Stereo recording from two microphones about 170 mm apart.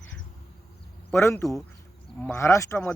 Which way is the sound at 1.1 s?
15° left (ahead or behind).